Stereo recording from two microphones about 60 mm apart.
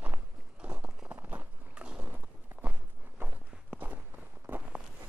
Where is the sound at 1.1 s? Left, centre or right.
Right.